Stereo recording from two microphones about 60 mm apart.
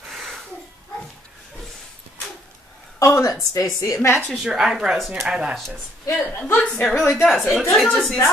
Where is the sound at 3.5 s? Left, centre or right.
Left.